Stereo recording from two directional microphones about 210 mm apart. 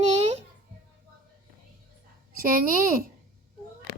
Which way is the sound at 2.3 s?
40° right (ahead or behind).